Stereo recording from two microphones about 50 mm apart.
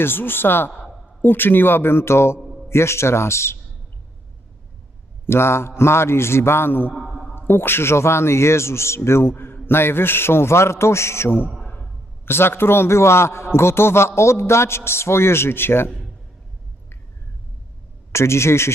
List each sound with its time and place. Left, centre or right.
0.0 s a man's voice: left
5.2 s a man's voice: left
6.9 s a sound: centre
7.3 s a man's voice: left
9.3 s a man's voice: left
12.2 s a man's voice: left
14.2 s a man's voice: left
18.1 s a man's voice: left